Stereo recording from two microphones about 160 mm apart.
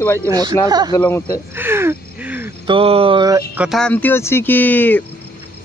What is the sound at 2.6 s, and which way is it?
Speech, 35° right (ahead or behind).